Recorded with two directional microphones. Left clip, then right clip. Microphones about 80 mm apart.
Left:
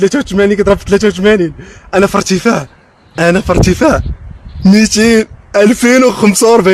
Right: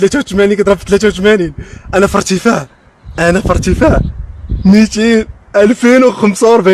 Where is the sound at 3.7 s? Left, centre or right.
Left.